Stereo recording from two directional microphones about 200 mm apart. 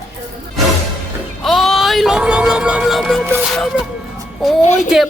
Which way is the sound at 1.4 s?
Centre (ahead or behind).